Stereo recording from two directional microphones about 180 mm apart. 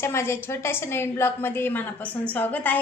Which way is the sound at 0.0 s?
15° left (ahead or behind).